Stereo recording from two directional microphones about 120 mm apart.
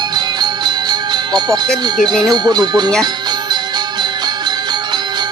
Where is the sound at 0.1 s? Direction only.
35° right (ahead or behind).